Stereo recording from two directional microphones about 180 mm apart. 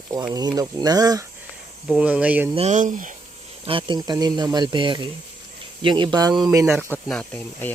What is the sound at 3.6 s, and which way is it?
Speech, 30° right (ahead or behind).